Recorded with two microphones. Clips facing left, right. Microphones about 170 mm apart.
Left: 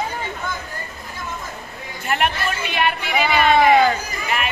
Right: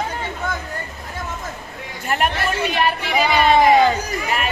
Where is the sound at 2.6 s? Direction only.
40° right (ahead or behind).